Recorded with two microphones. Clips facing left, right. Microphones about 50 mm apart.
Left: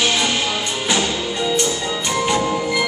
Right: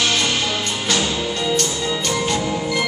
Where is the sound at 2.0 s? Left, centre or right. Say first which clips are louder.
Left 5 dB; centre.